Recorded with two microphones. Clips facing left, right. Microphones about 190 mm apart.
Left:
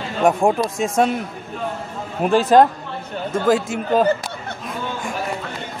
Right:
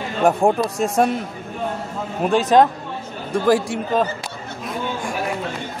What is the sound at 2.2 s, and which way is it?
Speech, centre (ahead or behind).